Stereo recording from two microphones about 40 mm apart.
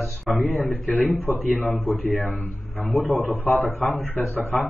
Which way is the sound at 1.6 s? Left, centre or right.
Left.